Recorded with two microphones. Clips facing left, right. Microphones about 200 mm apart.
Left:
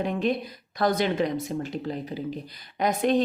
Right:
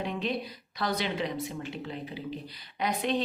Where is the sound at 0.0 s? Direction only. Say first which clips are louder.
Left 6 dB; 50° left (ahead or behind).